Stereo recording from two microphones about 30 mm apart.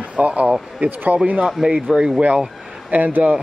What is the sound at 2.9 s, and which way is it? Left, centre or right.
Speech, right.